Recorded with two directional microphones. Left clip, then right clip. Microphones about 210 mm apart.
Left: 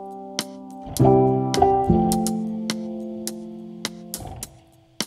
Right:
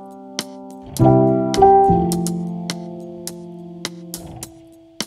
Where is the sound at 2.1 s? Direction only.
Centre (ahead or behind).